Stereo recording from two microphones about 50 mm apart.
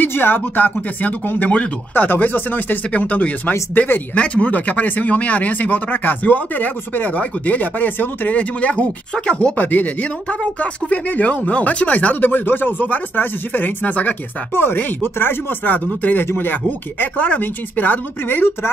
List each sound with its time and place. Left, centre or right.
0.1 s speech: left
14.5 s speech: left